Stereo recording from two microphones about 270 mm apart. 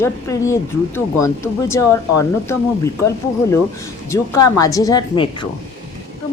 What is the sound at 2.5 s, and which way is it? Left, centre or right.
Speech, centre.